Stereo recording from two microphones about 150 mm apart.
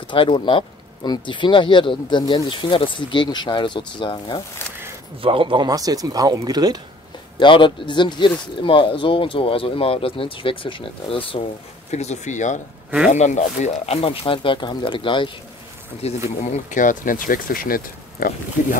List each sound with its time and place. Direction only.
0.1 s speech: 35° left (ahead or behind)
5.2 s speech: 35° right (ahead or behind)
7.3 s speech: 30° left (ahead or behind)
11.9 s speech: 50° left (ahead or behind)
14.2 s speech: 35° left (ahead or behind)
16.0 s speech: 45° left (ahead or behind)
16.4 s speech: 55° left (ahead or behind)